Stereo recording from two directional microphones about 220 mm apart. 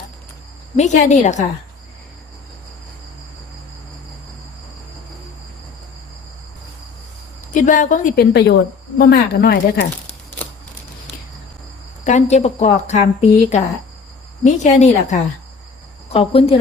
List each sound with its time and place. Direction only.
0.8 s speech: 30° left (ahead or behind)
7.5 s speech: 35° left (ahead or behind)
12.0 s speech: 30° left (ahead or behind)